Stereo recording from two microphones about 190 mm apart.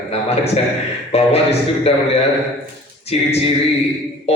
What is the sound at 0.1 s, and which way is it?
Speech, 35° left (ahead or behind).